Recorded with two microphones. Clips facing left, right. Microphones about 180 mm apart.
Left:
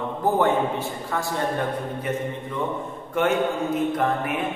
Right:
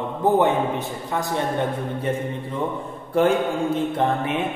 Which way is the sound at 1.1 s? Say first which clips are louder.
Right 2 dB; 20° right (ahead or behind).